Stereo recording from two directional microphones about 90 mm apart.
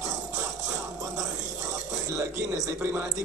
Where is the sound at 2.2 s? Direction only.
25° right (ahead or behind).